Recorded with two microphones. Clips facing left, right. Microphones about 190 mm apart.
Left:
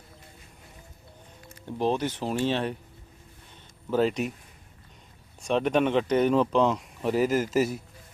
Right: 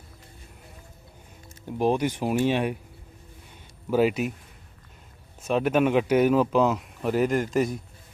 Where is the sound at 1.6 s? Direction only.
10° right (ahead or behind).